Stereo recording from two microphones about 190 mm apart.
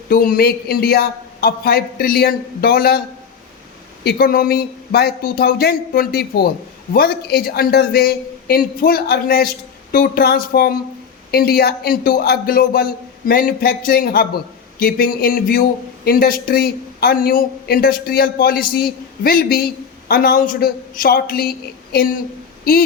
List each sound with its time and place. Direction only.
0.1 s speech: 50° left (ahead or behind)
4.0 s speech: 50° left (ahead or behind)